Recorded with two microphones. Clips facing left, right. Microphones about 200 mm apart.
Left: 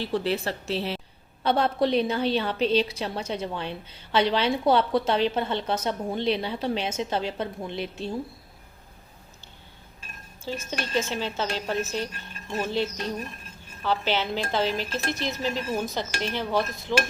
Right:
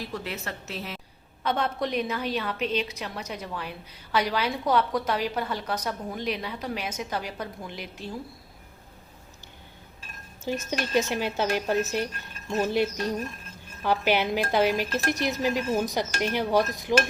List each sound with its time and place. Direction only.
0.0 s a woman's voice: 30° left (ahead or behind)
10.7 s speech: 15° right (ahead or behind)